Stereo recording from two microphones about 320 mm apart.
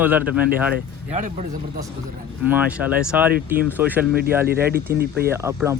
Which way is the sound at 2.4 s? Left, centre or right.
Centre.